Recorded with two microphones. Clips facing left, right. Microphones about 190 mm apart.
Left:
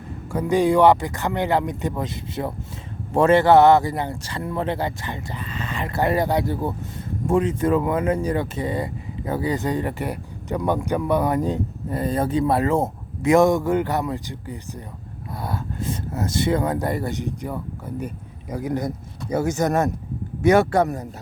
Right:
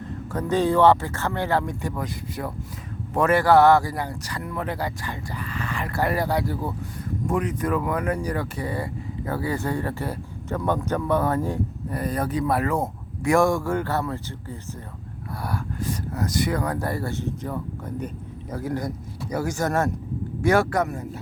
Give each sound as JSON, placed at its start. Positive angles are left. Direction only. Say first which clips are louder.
{"t": 0.3, "sound": "speech", "louder": "left 3 dB", "side_deg": 10}